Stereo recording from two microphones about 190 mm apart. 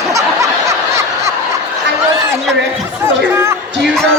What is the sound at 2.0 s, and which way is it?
A man's voice, 15° right (ahead or behind).